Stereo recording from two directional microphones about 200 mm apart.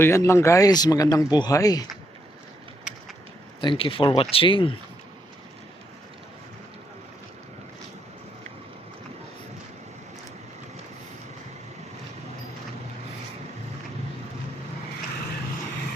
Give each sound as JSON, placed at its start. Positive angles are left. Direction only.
{"t": 0.0, "sound": "speech", "side_deg": 15}
{"t": 3.6, "sound": "speech", "side_deg": 25}